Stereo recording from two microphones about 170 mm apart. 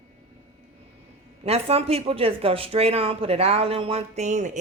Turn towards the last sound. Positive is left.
turn(degrees=-45)  # may be behind; listen again after turning